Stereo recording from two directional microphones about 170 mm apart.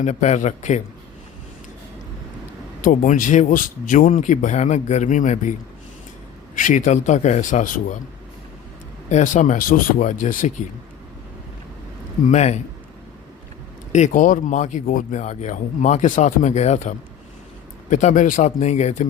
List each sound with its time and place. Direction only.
0.0 s speech: 45° left (ahead or behind)
2.8 s speech: 50° left (ahead or behind)
6.6 s speech: 50° left (ahead or behind)
9.0 s speech: 45° left (ahead or behind)
12.2 s speech: 45° left (ahead or behind)
13.9 s speech: 45° left (ahead or behind)